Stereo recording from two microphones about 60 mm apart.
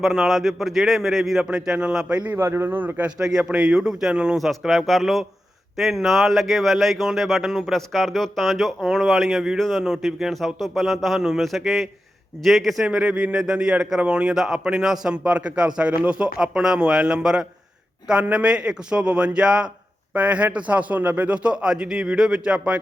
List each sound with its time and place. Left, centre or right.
0.0 s speech: centre
1.5 s a man's voice: centre
2.1 s a man's voice: right
2.4 s a man's voice: right
3.2 s a man's voice: centre
4.4 s a man's voice: centre
13.0 s a man's voice: centre